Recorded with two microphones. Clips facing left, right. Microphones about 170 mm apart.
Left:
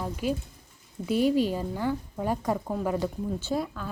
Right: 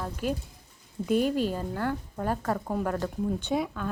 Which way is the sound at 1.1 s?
45° right (ahead or behind).